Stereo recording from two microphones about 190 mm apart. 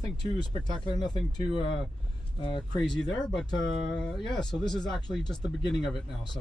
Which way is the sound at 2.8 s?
5° left (ahead or behind).